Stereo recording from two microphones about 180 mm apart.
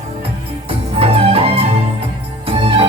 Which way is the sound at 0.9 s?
35° right (ahead or behind).